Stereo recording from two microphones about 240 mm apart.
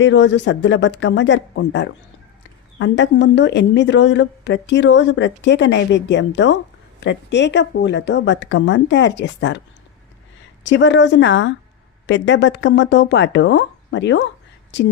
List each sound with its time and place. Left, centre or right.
0.0 s a woman's voice: left
10.6 s a woman's voice: left